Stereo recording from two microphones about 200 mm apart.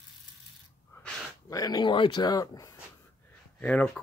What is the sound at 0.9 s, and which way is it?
Speech, 15° left (ahead or behind).